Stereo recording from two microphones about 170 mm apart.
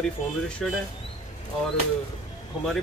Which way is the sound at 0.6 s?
Centre (ahead or behind).